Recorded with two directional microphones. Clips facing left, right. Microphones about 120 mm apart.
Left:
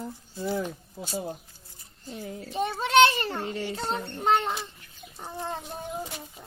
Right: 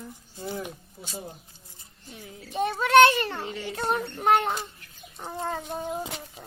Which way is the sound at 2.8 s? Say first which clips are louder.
Right 3 dB; 55° right (ahead or behind).